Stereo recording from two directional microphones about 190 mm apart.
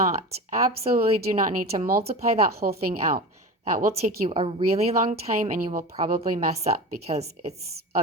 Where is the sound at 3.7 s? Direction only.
30° right (ahead or behind).